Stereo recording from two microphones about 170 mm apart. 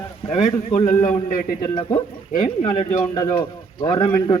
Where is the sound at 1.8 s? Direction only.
25° left (ahead or behind).